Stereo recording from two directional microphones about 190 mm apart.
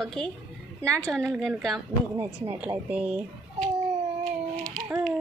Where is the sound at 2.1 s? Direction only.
10° right (ahead or behind).